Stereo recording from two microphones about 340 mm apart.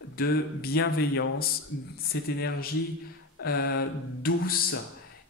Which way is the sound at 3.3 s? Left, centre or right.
Left.